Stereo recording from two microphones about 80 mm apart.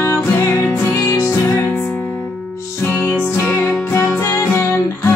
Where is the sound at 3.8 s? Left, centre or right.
Left.